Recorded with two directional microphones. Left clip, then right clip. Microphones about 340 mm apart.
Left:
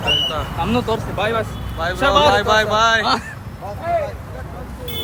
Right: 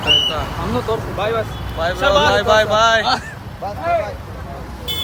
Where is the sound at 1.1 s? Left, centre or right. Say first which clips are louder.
Even; left.